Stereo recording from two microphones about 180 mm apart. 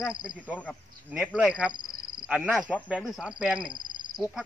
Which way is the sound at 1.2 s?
5° right (ahead or behind).